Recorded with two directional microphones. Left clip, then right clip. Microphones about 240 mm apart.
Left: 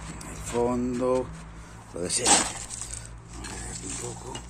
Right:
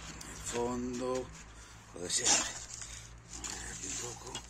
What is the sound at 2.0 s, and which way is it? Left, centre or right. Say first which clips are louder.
Speech: left 8 dB; left.